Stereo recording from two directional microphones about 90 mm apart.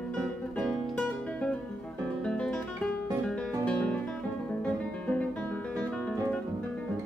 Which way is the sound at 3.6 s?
10° left (ahead or behind).